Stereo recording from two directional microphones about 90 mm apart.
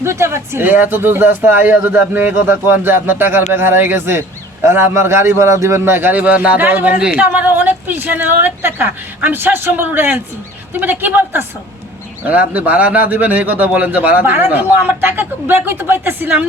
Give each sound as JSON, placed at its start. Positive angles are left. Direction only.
{"t": 0.0, "sound": "a man's voice", "side_deg": -30}